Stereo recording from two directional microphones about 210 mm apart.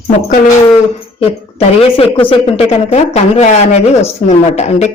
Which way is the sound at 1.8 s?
25° left (ahead or behind).